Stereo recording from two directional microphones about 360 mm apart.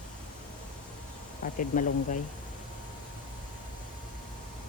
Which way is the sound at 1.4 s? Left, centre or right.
Left.